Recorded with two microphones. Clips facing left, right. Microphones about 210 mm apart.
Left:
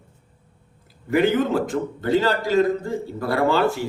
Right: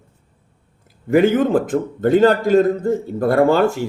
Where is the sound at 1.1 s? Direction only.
50° right (ahead or behind).